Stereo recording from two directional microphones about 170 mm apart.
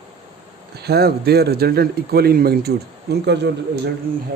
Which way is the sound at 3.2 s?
85° right.